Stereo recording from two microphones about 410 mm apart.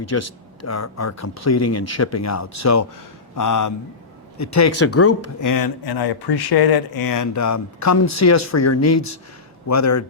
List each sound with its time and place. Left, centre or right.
0.0 s speech: left
5.4 s speech: left